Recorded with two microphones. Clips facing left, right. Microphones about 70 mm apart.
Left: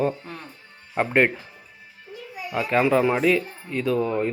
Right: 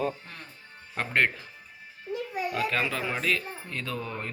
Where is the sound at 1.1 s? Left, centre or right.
Centre.